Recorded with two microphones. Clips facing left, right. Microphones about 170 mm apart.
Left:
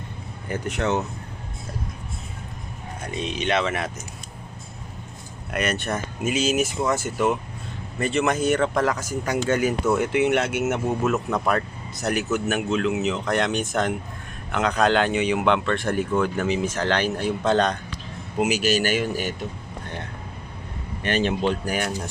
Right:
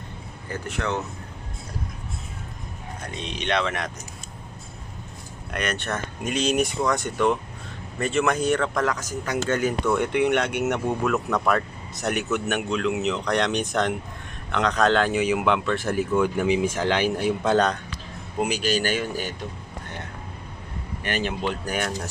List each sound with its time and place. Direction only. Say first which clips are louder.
0.5 s speech: left 4 dB; 20° left (ahead or behind)
3.1 s speech: left 3 dB; 5° left (ahead or behind)
5.5 s speech: left 3 dB; 5° left (ahead or behind)
8.5 s speech: left 3 dB; 20° left (ahead or behind)
8.8 s speech: left 2 dB; 10° left (ahead or behind); by 17.7 s 10° right (ahead or behind)
18.3 s speech: left 3 dB; 5° left (ahead or behind)
21.0 s speech: left 4 dB; 25° left (ahead or behind)
21.6 s speech: left 1 dB; 10° left (ahead or behind)